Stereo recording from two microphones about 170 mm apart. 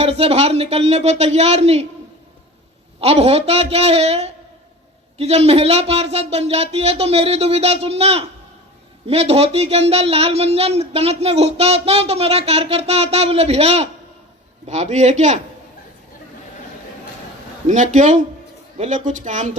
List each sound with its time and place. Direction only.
0.0 s speech: 35° right (ahead or behind)
3.0 s a man's voice: 35° right (ahead or behind)
17.7 s a man's voice: 45° right (ahead or behind)